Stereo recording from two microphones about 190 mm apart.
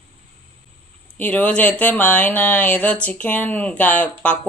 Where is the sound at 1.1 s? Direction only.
5° left (ahead or behind).